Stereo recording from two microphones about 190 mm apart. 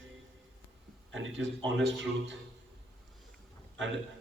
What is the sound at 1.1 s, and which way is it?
A man's voice, 85° right.